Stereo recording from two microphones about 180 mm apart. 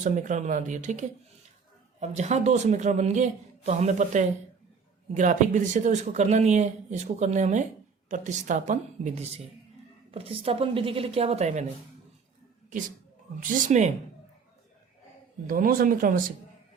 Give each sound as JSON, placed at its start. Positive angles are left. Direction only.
{"t": 0.0, "sound": "speech", "side_deg": -45}
{"t": 13.4, "sound": "speech", "side_deg": -45}
{"t": 15.4, "sound": "speech", "side_deg": -50}